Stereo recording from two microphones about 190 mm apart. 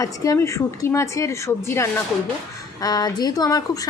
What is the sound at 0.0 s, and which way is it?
A woman's voice, 15° left (ahead or behind).